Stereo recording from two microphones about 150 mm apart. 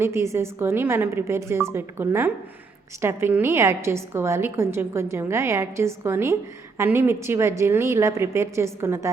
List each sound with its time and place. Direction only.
0.0 s a woman's voice: 20° right (ahead or behind)